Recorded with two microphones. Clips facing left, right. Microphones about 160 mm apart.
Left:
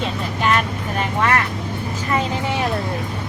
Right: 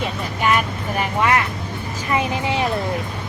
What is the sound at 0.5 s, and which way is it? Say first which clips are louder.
Vehicle: even; 10° right (ahead or behind).